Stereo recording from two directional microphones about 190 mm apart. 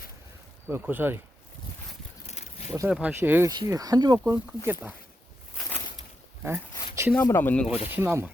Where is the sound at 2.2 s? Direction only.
35° left (ahead or behind).